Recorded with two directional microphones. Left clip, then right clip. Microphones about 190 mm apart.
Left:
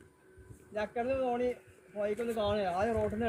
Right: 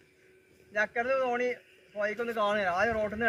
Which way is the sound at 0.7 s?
20° right (ahead or behind).